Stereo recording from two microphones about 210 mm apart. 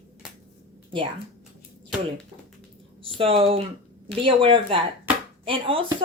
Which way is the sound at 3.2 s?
25° right (ahead or behind).